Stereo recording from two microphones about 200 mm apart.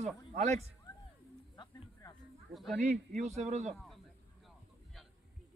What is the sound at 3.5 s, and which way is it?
Speech, 35° right (ahead or behind).